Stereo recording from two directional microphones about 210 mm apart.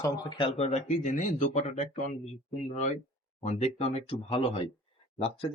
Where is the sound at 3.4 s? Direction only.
30° left (ahead or behind).